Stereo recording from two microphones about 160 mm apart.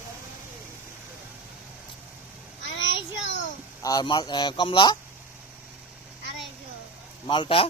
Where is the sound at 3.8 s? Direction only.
25° left (ahead or behind).